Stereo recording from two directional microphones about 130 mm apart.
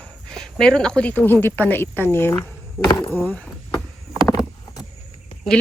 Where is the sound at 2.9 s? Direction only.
30° left (ahead or behind).